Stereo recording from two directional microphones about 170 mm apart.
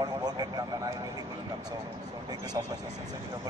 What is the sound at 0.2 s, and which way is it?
Vehicle, 25° right (ahead or behind).